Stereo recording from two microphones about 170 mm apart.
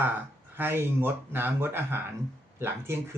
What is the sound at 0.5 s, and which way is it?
Speech, 10° right (ahead or behind).